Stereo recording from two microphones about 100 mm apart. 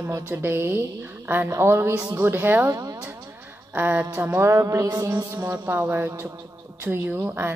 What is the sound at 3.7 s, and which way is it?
A woman's voice, 15° right (ahead or behind).